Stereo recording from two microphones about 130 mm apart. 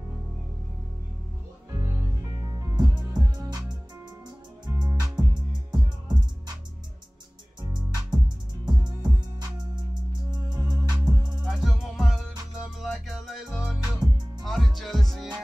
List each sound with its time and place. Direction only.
1.7 s music: 30° right (ahead or behind)
4.6 s music: 30° right (ahead or behind)
7.6 s music: 30° right (ahead or behind)
11.4 s music: centre (ahead or behind)